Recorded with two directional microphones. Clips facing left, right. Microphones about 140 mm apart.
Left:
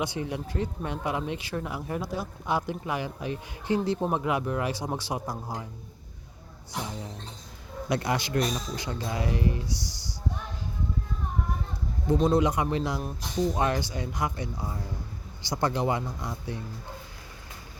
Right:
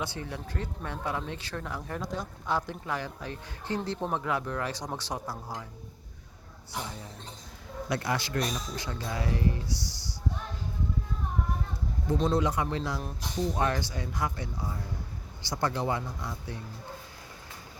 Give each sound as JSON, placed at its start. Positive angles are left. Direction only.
{"t": 0.0, "sound": "speech", "side_deg": 15}
{"t": 7.9, "sound": "speech", "side_deg": 20}
{"t": 12.1, "sound": "speech", "side_deg": 10}